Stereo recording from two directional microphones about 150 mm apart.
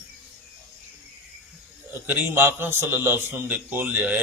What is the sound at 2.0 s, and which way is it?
Speech, 10° right (ahead or behind).